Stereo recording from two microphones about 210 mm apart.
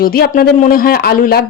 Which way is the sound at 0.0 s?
45° left (ahead or behind).